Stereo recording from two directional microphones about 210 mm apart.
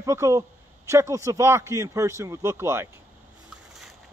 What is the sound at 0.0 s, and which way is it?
A man's voice, 15° right (ahead or behind).